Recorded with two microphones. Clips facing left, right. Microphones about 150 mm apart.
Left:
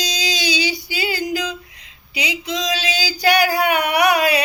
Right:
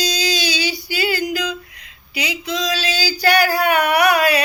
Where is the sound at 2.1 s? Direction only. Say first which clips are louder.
Right 1 dB; 20° left (ahead or behind).